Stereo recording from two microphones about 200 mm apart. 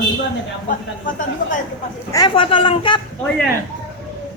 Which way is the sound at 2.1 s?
25° left (ahead or behind).